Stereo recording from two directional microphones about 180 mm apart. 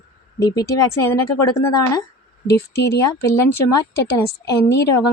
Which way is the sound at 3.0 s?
15° left (ahead or behind).